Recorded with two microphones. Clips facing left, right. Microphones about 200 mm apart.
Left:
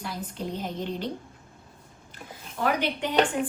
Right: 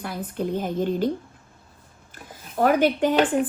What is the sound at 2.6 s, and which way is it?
Speech, 45° right (ahead or behind).